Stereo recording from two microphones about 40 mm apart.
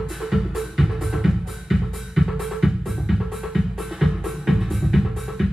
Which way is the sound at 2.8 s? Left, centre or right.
Centre.